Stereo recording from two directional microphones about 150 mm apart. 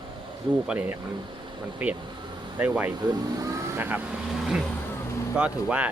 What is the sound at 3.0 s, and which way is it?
Speech, 20° right (ahead or behind).